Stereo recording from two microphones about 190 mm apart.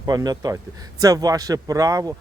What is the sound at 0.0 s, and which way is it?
Speech, 20° right (ahead or behind).